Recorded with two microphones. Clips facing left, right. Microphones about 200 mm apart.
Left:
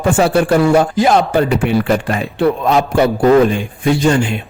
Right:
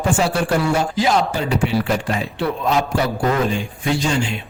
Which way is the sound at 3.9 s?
55° left (ahead or behind).